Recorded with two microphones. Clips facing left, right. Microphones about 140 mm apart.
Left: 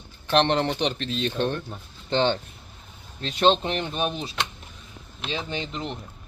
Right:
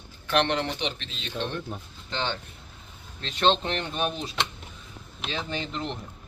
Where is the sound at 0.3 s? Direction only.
30° left (ahead or behind).